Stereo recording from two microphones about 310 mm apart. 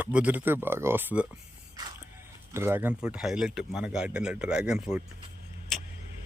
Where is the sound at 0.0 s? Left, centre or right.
Centre.